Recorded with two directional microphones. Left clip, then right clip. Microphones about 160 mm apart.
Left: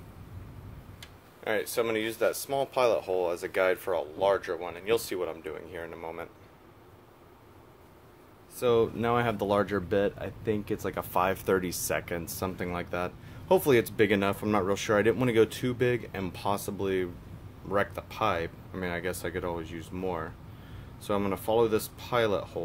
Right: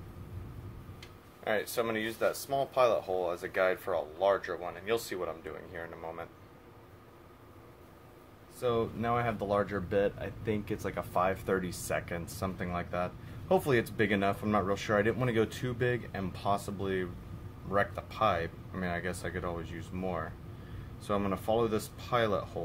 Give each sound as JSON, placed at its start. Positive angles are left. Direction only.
{"t": 1.4, "sound": "speech", "side_deg": 45}
{"t": 8.5, "sound": "speech", "side_deg": 45}